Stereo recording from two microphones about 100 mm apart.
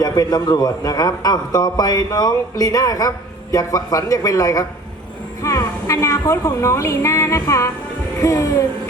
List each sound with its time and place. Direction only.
0.0 s a man's voice: 40° left (ahead or behind)